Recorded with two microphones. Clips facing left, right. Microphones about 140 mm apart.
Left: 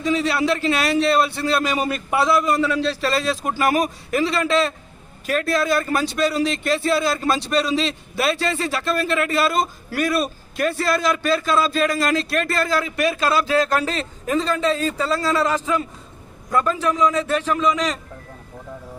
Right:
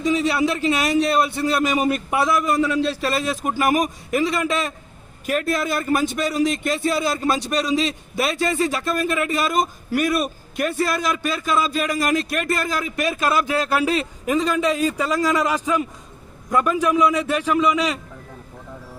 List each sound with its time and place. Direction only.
0.0 s speech: 20° right (ahead or behind)